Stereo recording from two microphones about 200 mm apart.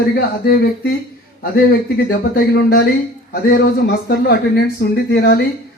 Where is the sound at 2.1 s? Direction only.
50° left (ahead or behind).